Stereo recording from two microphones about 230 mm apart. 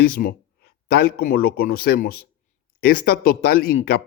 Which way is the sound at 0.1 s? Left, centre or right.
Left.